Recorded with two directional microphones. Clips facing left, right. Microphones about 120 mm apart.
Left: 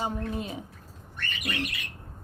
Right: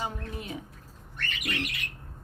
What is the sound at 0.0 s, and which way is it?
Speech, 25° left (ahead or behind).